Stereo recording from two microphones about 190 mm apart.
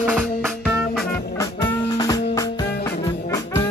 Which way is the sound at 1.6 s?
20° left (ahead or behind).